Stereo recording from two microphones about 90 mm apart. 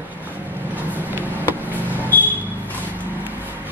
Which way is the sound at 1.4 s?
20° left (ahead or behind).